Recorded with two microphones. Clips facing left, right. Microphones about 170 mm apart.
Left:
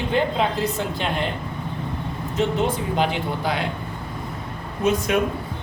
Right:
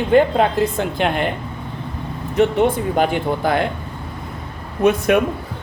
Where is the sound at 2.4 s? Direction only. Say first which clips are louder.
Right 7 dB; 60° right (ahead or behind).